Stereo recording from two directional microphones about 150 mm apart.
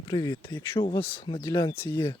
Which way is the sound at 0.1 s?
25° left (ahead or behind).